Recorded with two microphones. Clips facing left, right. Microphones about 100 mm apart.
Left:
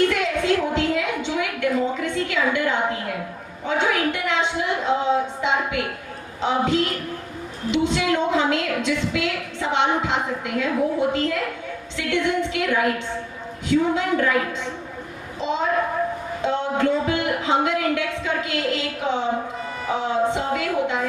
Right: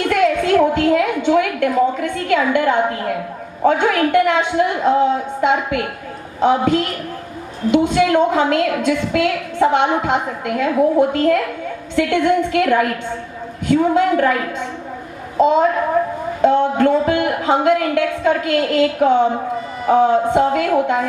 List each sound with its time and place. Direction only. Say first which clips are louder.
0.1 s a woman's voice: right 7 dB; 50° right (ahead or behind)
15.4 s a woman's voice: right 9 dB; 50° right (ahead or behind)